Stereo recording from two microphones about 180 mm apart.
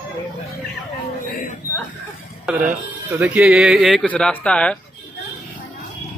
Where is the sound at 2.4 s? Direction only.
10° right (ahead or behind); by 4.7 s 5° left (ahead or behind).